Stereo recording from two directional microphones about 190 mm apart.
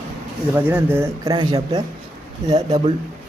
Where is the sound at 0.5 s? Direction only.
10° right (ahead or behind).